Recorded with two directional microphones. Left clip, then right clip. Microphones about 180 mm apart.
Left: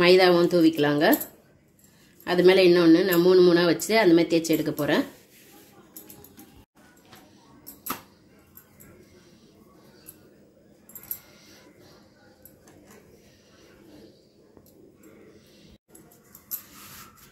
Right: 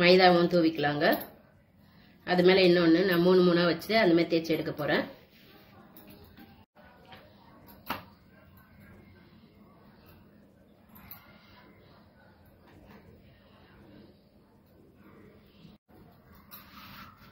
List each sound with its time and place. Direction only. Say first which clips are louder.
0.0 s speech: left 3 dB; 55° left (ahead or behind)
2.2 s speech: left 5 dB; 55° left (ahead or behind)